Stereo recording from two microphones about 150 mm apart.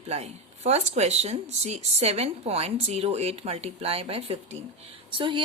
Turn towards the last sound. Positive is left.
turn(degrees=-35)  # may be behind; listen again after turning